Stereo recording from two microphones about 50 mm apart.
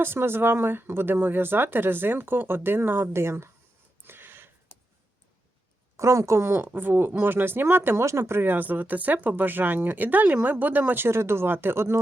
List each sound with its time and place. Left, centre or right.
0.0 s speech: right
4.0 s a sound: right
6.0 s a woman's voice: right
6.4 s speech: right
8.0 s speech: right
8.4 s speech: right